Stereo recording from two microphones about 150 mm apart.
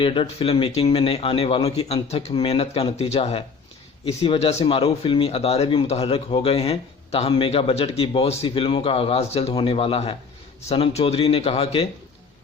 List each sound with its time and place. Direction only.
0.0 s speech: 35° left (ahead or behind)